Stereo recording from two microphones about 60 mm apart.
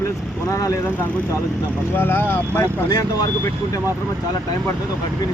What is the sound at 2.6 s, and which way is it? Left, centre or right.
Speech, left.